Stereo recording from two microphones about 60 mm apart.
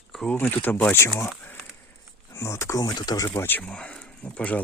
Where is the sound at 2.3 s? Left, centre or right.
Left.